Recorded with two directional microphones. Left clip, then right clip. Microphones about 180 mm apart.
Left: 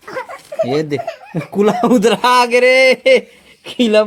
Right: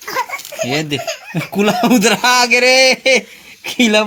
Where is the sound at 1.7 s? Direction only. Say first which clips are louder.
Even; 15° right (ahead or behind).